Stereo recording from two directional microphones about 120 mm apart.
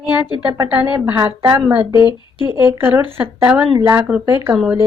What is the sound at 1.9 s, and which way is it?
Speech, 35° left (ahead or behind).